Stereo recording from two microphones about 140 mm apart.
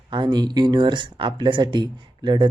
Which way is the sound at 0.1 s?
30° right (ahead or behind).